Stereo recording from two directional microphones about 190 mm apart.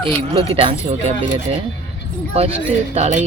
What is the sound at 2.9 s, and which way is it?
Speech, 35° right (ahead or behind).